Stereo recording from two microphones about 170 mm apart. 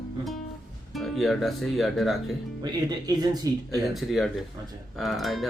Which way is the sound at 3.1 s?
25° right (ahead or behind).